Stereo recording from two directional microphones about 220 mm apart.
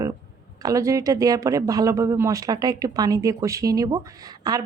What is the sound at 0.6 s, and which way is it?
Speech, 15° right (ahead or behind).